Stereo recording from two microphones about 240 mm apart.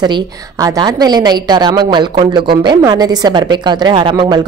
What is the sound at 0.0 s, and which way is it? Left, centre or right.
A woman's voice, centre.